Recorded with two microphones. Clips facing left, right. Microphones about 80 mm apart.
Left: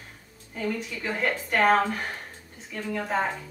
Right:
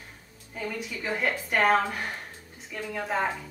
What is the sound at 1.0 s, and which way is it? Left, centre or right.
Speech, centre.